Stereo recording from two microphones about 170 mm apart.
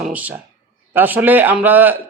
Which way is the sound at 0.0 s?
10° right (ahead or behind).